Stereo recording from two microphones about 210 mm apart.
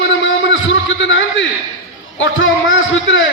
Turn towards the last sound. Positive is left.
turn(degrees=65)  # may be behind; listen again after turning